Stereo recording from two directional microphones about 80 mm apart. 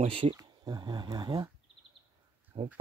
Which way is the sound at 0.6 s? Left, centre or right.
Right.